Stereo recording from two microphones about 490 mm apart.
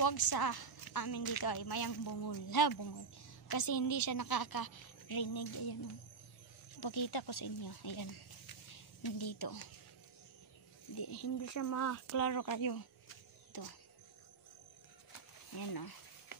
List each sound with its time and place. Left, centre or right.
0.0 s a woman's voice: left
6.8 s a woman's voice: left
11.0 s speech: left
13.5 s music: left
15.5 s a woman's voice: left